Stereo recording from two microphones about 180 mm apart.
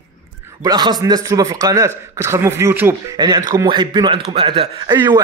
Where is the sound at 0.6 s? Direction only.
20° right (ahead or behind).